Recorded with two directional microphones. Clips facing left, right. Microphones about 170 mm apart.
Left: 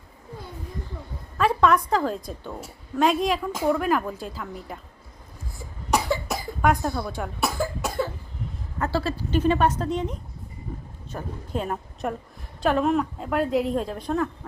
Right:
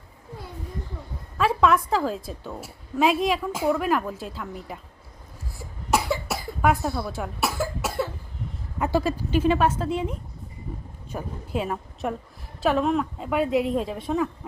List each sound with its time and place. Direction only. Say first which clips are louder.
1.4 s a woman's voice: even; centre (ahead or behind)
5.9 s cough: even; 5° right (ahead or behind)
8.8 s a woman's voice: right 2 dB; 15° right (ahead or behind)